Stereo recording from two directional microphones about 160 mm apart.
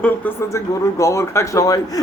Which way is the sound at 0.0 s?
15° left (ahead or behind).